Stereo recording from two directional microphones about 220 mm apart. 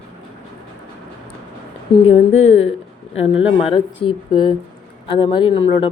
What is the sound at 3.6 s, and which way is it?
Speech, 25° left (ahead or behind).